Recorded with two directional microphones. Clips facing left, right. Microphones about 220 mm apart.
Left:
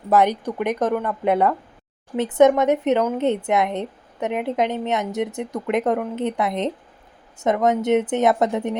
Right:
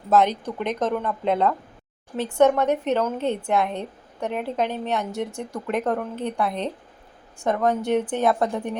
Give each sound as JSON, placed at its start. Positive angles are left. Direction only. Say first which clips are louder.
{"t": 0.1, "sound": "a woman's voice", "louder": "left 2 dB", "side_deg": 10}